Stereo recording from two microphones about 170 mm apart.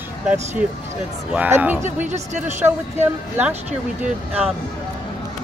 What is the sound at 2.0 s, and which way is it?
Speech, 45° right (ahead or behind).